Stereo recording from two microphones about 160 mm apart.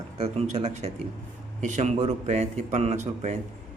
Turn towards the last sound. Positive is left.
turn(degrees=-45)  # may be behind; listen again after turning